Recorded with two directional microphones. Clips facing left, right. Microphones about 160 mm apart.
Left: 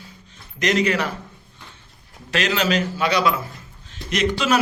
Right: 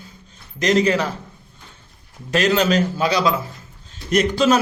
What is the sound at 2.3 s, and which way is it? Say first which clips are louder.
A man's voice: right 4 dB; 40° right (ahead or behind).